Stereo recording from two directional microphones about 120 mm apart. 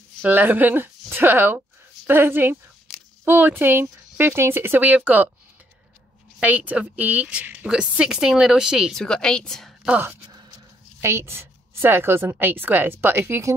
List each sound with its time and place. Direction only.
0.2 s a woman's voice: 15° right (ahead or behind)
6.4 s a woman's voice: 15° right (ahead or behind)
9.0 s a woman's voice: 5° left (ahead or behind)
9.8 s a woman's voice: 15° right (ahead or behind)